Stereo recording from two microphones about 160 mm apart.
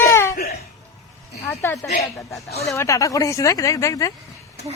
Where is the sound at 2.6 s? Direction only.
20° left (ahead or behind).